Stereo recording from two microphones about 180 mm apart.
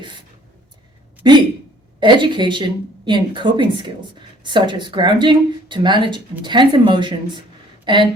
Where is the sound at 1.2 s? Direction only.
25° right (ahead or behind).